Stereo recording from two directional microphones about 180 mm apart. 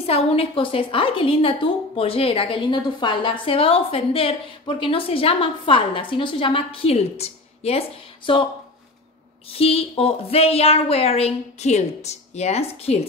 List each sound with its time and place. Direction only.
0.0 s a woman's voice: 35° left (ahead or behind)
9.5 s a woman's voice: 35° left (ahead or behind)